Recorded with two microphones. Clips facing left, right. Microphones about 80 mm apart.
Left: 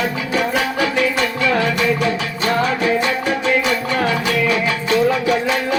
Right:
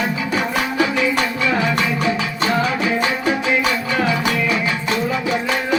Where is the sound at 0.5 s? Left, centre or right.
Left.